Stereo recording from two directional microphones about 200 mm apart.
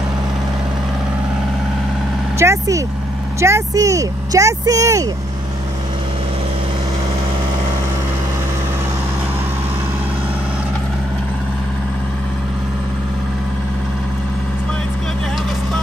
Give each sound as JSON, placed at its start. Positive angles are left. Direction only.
{"t": 2.3, "sound": "speech", "side_deg": -15}